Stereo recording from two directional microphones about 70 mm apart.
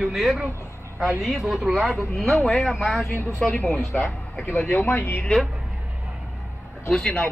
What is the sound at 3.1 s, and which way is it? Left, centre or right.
Speech, left.